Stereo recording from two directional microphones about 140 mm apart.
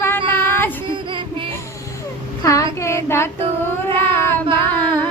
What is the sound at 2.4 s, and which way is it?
Child singing, 20° left (ahead or behind).